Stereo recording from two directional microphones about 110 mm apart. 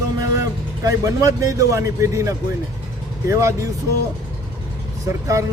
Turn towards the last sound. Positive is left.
turn(degrees=-30)  # may be behind; listen again after turning